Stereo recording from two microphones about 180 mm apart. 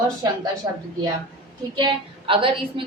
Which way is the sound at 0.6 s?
20° right (ahead or behind).